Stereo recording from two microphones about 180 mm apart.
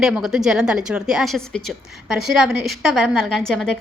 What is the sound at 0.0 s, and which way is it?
A woman's voice, centre (ahead or behind).